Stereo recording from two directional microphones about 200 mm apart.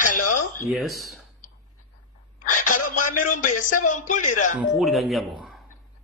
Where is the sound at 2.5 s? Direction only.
40° left (ahead or behind).